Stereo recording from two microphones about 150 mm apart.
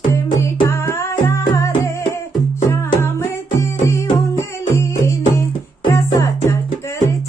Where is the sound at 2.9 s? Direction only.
20° left (ahead or behind).